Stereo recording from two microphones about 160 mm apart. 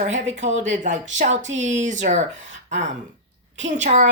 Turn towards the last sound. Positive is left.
turn(degrees=-50)  # may be behind; listen again after turning